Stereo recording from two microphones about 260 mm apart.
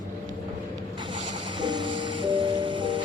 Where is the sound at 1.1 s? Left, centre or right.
Centre.